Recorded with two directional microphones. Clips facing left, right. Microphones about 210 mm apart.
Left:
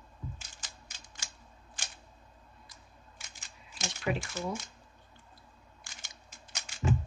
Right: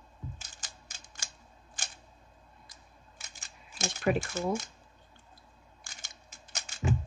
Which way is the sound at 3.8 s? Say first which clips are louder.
Right 5 dB; 45° right (ahead or behind).